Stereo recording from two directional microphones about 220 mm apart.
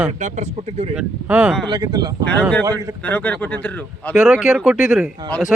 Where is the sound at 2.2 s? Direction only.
5° left (ahead or behind).